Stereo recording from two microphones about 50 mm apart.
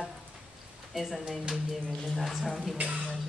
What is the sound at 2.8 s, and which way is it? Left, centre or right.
Speech, right.